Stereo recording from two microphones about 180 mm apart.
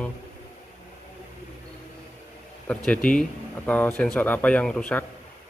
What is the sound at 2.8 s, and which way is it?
Speech, 5° left (ahead or behind).